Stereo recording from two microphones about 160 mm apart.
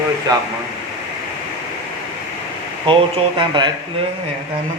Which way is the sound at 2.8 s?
30° right (ahead or behind).